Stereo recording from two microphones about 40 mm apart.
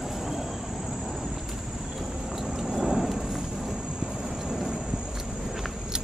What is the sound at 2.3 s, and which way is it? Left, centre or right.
Vehicle, centre.